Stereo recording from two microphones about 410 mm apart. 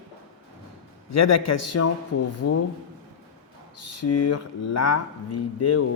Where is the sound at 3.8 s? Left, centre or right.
Left.